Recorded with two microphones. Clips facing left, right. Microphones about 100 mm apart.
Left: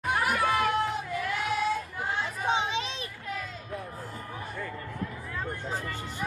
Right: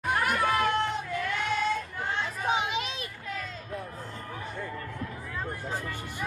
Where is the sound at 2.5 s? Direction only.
30° left (ahead or behind).